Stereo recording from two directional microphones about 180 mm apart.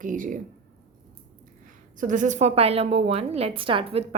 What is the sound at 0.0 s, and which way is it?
Speech, 45° right (ahead or behind).